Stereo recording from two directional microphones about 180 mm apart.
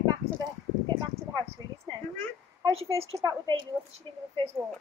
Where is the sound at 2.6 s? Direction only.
30° right (ahead or behind).